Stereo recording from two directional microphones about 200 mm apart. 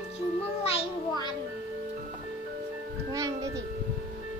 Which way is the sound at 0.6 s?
30° left (ahead or behind).